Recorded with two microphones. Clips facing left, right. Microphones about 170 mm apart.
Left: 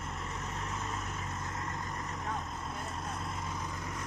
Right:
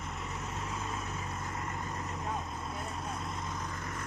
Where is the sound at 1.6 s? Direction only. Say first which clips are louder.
Right 1 dB; 15° right (ahead or behind).